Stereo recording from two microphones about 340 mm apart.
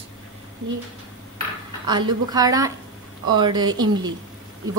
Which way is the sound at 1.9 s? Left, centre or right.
Centre.